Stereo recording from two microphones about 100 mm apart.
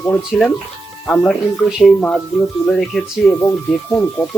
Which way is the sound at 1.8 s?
10° left (ahead or behind).